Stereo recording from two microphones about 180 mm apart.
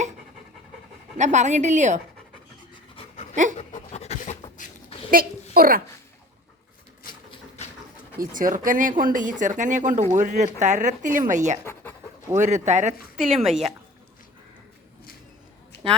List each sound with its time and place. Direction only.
1.1 s speech: 40° right (ahead or behind)
2.9 s pant: 30° left (ahead or behind)
3.6 s a sound: 35° left (ahead or behind)
5.1 s a child's voice: 55° right (ahead or behind)
8.2 s speech: 50° right (ahead or behind)
11.6 s pant: 10° left (ahead or behind)
12.4 s speech: 40° right (ahead or behind)
13.1 s speech: centre (ahead or behind)